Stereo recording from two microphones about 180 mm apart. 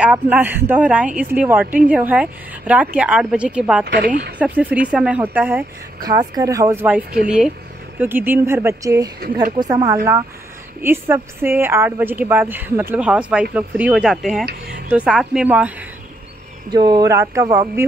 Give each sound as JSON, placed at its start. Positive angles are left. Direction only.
{"t": 0.0, "sound": "a woman's voice", "side_deg": -5}
{"t": 3.8, "sound": "speech", "side_deg": -65}
{"t": 4.4, "sound": "a woman's voice", "side_deg": -10}
{"t": 6.0, "sound": "a woman's voice", "side_deg": -20}
{"t": 14.4, "sound": "speech", "side_deg": -60}
{"t": 14.9, "sound": "a woman's voice", "side_deg": -5}
{"t": 16.7, "sound": "speech", "side_deg": -25}